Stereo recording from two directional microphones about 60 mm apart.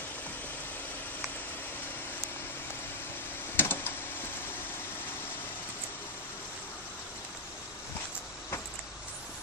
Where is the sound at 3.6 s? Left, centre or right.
Left.